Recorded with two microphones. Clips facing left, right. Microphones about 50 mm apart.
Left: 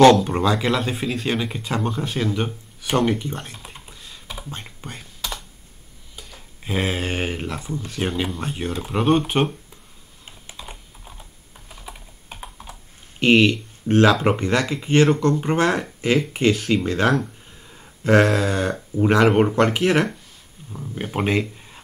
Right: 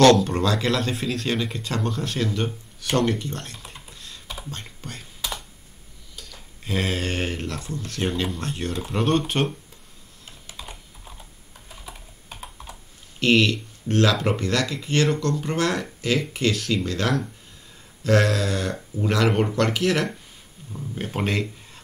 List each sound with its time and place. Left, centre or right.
0.0 s speech: centre
5.2 s computer keyboard: centre
6.1 s speech: centre
10.7 s computer keyboard: centre
11.7 s typing: centre
13.2 s speech: centre